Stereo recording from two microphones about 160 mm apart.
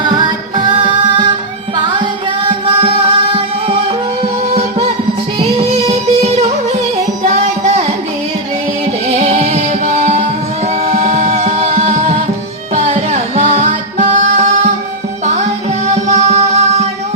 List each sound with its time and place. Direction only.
2.8 s music: 35° right (ahead or behind)
5.4 s music: 40° right (ahead or behind)
9.0 s music: 50° right (ahead or behind)
16.0 s music: 45° right (ahead or behind)